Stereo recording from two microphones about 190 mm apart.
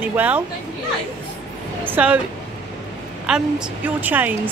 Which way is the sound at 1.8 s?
10° right (ahead or behind).